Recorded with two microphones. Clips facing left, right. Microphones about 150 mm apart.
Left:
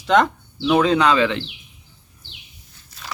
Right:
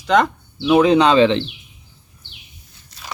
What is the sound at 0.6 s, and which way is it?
Speech, 15° right (ahead or behind).